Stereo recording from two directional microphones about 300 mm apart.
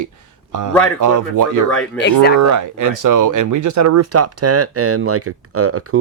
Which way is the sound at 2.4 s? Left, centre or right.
Right.